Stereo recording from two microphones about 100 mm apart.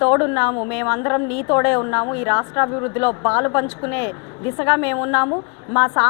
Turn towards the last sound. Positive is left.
turn(degrees=20)  # may be behind; listen again after turning